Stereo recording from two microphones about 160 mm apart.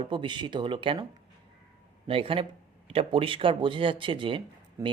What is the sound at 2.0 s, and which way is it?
Speech, 35° right (ahead or behind).